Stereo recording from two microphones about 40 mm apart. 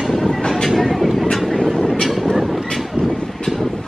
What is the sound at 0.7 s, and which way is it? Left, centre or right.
Vehicle, centre.